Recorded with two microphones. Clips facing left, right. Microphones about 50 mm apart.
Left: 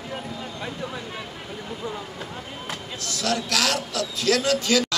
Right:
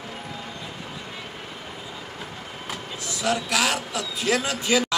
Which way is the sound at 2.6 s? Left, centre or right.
Centre.